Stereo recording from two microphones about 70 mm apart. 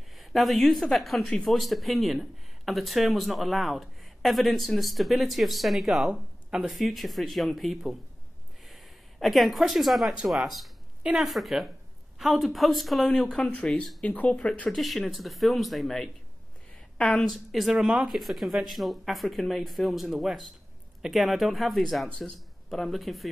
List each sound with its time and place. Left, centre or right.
0.2 s speech: centre
11.0 s speech: centre
11.2 s speech: centre
14.7 s speech: centre